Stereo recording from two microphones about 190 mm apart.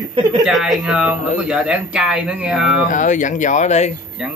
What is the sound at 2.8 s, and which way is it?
Speech, 40° left (ahead or behind).